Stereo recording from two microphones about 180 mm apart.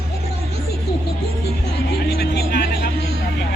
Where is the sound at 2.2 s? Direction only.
65° left (ahead or behind).